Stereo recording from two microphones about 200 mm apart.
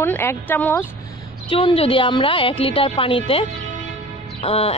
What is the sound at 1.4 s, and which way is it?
Speech, 25° left (ahead or behind).